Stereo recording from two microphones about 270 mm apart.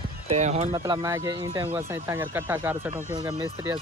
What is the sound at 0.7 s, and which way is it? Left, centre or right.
Speech, centre.